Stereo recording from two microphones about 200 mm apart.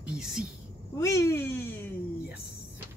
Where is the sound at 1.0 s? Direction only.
15° left (ahead or behind).